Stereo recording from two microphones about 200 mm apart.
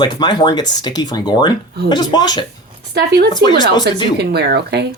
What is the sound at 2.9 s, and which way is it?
Speech, 55° right (ahead or behind).